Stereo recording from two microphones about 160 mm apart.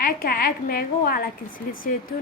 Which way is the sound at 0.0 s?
65° left (ahead or behind).